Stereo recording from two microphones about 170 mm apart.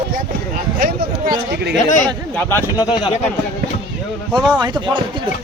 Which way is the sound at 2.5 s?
25° left (ahead or behind).